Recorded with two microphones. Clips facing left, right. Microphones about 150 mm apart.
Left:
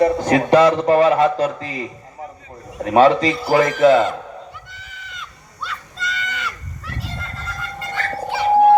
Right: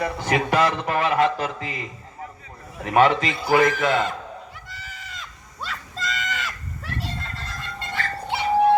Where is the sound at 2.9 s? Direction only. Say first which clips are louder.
Left 5 dB; 30° left (ahead or behind).